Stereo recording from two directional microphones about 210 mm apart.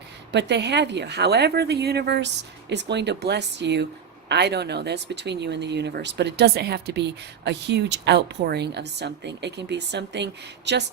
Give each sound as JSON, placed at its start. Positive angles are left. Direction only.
{"t": 0.3, "sound": "speech", "side_deg": -55}